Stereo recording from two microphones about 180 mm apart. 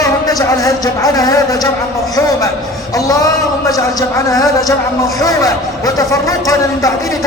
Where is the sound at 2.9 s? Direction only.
20° left (ahead or behind).